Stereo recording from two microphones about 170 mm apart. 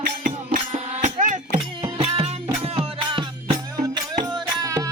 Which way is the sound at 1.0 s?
45° right (ahead or behind).